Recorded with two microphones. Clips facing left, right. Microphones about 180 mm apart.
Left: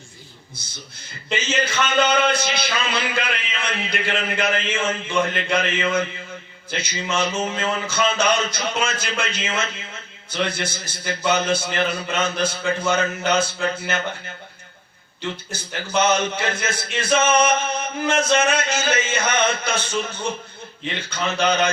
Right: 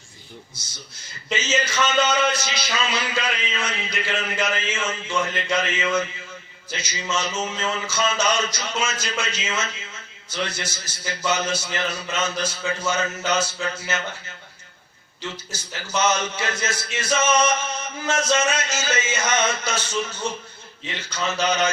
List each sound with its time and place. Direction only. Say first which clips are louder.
1.3 s a man's voice: left 1 dB; 55° left (ahead or behind)
15.4 s a man's voice: left 4 dB; 55° left (ahead or behind)